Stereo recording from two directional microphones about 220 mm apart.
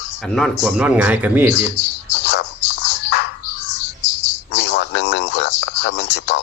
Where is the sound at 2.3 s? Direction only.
50° left (ahead or behind).